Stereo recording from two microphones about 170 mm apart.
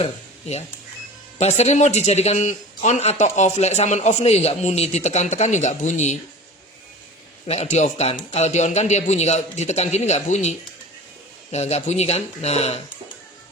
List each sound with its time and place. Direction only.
0.0 s a man's voice: 40° left (ahead or behind)
7.4 s a man's voice: 40° left (ahead or behind)
11.5 s a man's voice: 40° left (ahead or behind)